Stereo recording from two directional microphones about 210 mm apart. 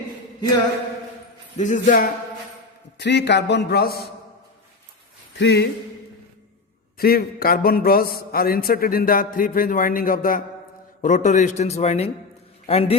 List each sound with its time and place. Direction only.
1.5 s a man's voice: 35° left (ahead or behind)
3.0 s a man's voice: 55° left (ahead or behind)
5.4 s a man's voice: 55° left (ahead or behind)
7.0 s a man's voice: 45° left (ahead or behind); by 13.0 s 30° left (ahead or behind)